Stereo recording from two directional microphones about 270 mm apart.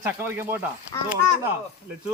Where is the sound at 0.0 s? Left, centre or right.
Centre.